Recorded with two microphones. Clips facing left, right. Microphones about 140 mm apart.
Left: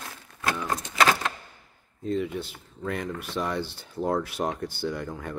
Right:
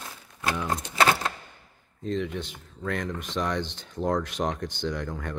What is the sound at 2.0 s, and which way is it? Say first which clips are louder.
Speech: left 1 dB; 10° left (ahead or behind).